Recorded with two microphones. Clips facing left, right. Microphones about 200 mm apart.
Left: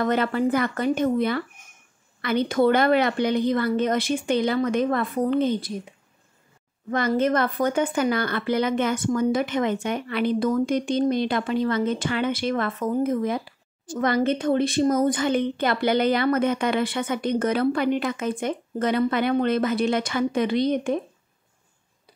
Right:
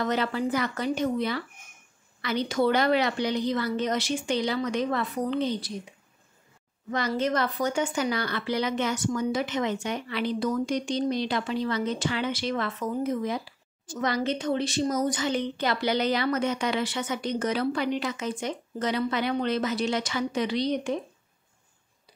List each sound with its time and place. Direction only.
0.0 s a woman's voice: 55° left (ahead or behind)
6.9 s a woman's voice: 55° left (ahead or behind)